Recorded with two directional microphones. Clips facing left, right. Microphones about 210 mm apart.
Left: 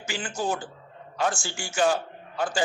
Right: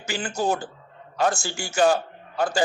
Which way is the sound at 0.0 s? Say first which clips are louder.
Right 4 dB; 40° right (ahead or behind).